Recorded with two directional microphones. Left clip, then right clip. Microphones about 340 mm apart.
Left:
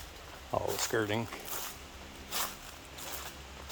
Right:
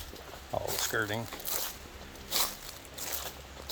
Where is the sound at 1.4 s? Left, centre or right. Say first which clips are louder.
Right 4 dB; right.